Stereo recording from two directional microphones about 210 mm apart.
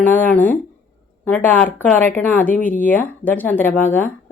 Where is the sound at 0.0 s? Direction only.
10° left (ahead or behind).